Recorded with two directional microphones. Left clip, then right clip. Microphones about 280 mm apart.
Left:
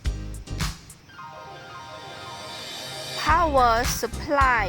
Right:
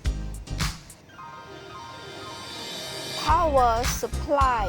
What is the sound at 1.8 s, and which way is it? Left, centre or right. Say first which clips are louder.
Music: even; centre.